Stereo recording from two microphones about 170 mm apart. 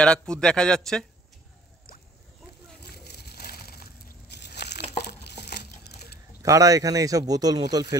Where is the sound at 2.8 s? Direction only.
75° left (ahead or behind).